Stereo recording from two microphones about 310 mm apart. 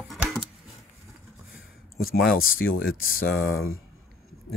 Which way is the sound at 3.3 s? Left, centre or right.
Left.